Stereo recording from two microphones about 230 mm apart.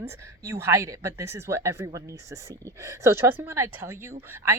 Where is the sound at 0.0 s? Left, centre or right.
Centre.